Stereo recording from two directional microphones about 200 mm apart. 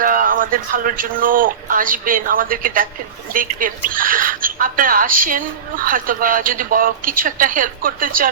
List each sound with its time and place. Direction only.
0.0 s a woman's voice: 45° right (ahead or behind)